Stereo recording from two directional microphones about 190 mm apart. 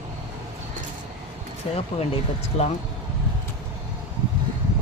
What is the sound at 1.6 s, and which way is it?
Speech, 30° left (ahead or behind).